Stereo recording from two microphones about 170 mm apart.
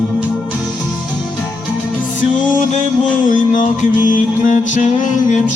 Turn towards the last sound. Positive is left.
turn(degrees=45)  # may be behind; listen again after turning